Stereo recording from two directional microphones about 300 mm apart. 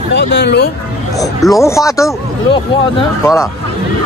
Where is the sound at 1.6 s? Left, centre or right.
Centre.